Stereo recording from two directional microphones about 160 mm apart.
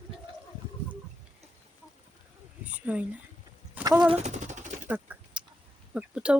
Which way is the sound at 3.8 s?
20° right (ahead or behind).